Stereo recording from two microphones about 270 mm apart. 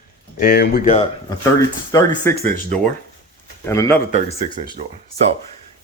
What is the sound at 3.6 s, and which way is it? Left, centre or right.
Speech, centre.